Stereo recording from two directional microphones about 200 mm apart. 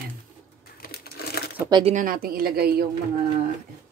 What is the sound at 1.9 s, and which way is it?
Speech, 45° right (ahead or behind).